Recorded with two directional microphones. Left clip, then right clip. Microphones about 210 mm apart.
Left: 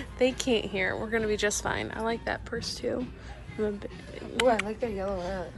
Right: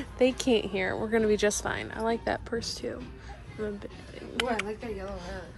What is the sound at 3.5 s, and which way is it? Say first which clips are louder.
Speech: left 4 dB; 10° right (ahead or behind).